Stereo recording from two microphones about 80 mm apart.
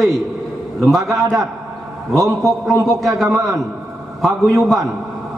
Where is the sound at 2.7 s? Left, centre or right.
Right.